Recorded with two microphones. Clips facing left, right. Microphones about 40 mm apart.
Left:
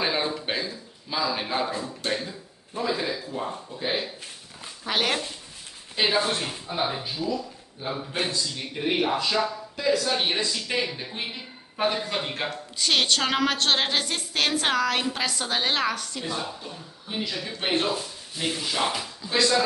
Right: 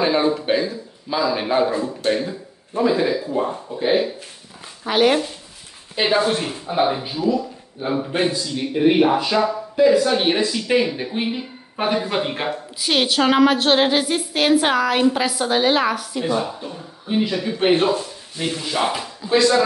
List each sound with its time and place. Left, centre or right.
0.0 s speech: centre
4.8 s speech: centre
17.9 s speech: centre